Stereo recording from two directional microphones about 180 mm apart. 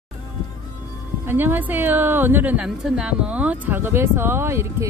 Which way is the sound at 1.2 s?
10° right (ahead or behind).